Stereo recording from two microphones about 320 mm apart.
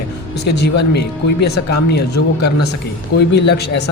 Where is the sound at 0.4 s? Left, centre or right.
Left.